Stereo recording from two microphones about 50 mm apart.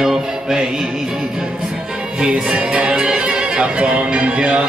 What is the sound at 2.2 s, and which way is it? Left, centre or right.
Music, right.